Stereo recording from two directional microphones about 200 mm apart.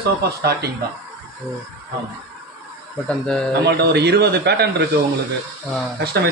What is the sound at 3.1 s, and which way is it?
Speech, 5° left (ahead or behind).